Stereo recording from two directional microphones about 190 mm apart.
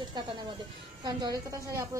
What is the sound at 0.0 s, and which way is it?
A woman's voice, 25° right (ahead or behind).